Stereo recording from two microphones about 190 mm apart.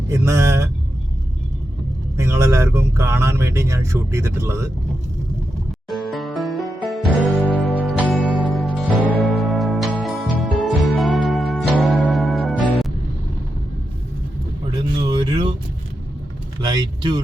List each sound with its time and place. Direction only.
0.1 s speech: 15° right (ahead or behind)
2.1 s speech: 15° right (ahead or behind)
5.9 s music: centre (ahead or behind)
14.7 s a sound: 25° right (ahead or behind)
16.6 s vehicle: 25° right (ahead or behind)